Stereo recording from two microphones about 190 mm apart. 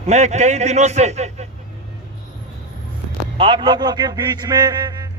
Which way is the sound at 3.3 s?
25° right (ahead or behind).